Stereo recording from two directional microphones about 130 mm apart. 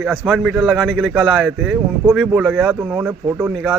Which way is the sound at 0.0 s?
10° right (ahead or behind).